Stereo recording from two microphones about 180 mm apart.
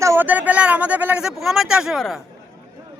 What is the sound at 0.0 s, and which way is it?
Speech, 15° right (ahead or behind).